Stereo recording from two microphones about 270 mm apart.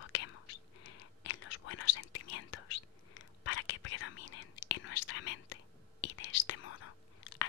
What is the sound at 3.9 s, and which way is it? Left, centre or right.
Whispering, left.